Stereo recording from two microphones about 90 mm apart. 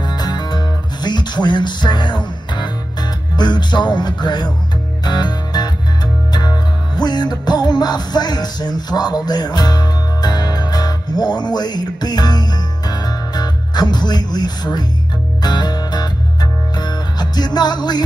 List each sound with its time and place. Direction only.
0.0 s music: 50° left (ahead or behind)